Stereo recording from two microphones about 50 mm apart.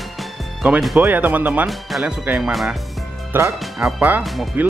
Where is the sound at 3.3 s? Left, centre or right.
Right.